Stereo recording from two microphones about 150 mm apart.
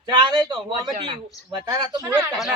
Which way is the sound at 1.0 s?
40° right (ahead or behind).